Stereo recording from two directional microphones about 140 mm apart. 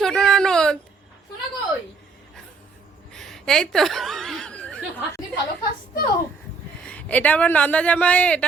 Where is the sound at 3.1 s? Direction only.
5° left (ahead or behind).